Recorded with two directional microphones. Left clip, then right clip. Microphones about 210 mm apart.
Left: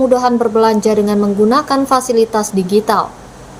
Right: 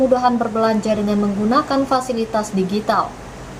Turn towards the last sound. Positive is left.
turn(degrees=50)  # may be behind; listen again after turning